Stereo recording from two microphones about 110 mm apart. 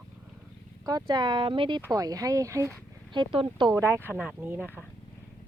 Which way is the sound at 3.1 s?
50° right (ahead or behind).